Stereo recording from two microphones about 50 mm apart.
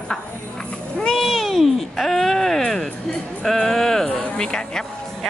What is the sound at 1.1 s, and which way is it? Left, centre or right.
Speech, centre.